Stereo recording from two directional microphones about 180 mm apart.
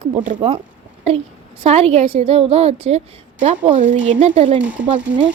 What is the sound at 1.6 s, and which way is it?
A woman's voice, 35° right (ahead or behind).